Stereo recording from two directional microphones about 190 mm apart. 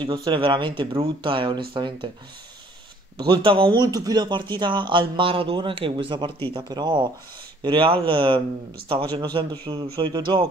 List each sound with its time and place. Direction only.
0.0 s speech: 25° right (ahead or behind)
3.2 s speech: 25° right (ahead or behind)